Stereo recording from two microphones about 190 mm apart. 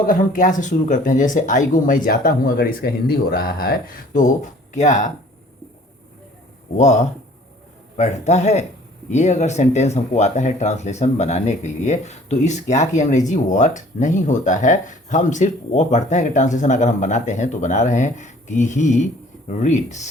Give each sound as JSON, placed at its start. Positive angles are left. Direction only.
{"t": 0.0, "sound": "speech", "side_deg": 45}
{"t": 6.7, "sound": "speech", "side_deg": 40}